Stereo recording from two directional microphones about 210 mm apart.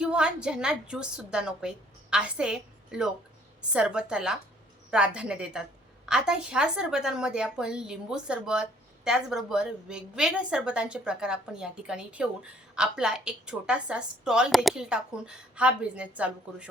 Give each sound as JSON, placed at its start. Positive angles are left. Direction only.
{"t": 0.0, "sound": "a woman's voice", "side_deg": -5}